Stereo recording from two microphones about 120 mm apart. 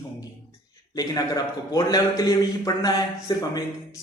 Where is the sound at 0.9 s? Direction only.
30° left (ahead or behind).